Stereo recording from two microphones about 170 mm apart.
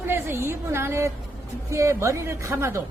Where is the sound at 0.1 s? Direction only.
15° right (ahead or behind).